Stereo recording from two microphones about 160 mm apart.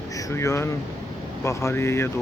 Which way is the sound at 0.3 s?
20° left (ahead or behind).